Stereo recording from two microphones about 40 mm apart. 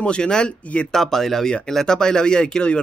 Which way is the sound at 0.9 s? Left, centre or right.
Centre.